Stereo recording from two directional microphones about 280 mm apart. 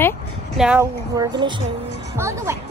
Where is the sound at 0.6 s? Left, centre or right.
Centre.